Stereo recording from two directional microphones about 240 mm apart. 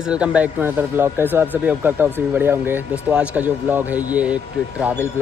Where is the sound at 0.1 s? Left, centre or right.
Centre.